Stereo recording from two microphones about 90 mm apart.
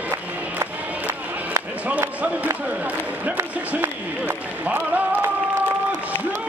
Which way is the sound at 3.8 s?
20° right (ahead or behind).